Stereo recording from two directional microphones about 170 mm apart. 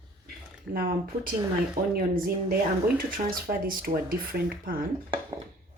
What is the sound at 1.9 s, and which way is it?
Speech, 60° right (ahead or behind).